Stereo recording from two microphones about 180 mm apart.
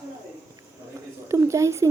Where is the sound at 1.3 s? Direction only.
15° right (ahead or behind).